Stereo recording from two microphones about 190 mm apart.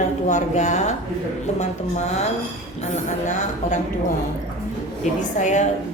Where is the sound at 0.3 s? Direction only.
40° left (ahead or behind).